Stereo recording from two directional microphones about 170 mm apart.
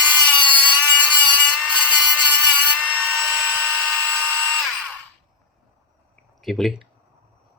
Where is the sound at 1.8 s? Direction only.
10° right (ahead or behind).